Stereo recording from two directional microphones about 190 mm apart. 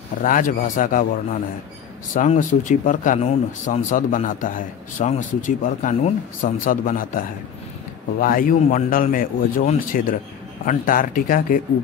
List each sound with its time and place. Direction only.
0.2 s speech: 45° left (ahead or behind)